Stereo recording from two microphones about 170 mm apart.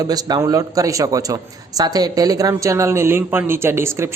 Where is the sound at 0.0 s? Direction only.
20° right (ahead or behind).